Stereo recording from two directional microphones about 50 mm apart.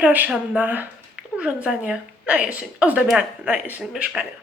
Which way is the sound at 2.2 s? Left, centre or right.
Right.